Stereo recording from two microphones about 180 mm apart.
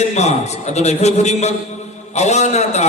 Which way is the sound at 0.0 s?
40° left (ahead or behind).